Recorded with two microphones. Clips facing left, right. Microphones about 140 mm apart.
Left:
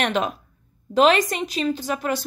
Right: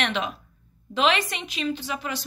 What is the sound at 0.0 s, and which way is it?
A woman's voice, 45° left (ahead or behind).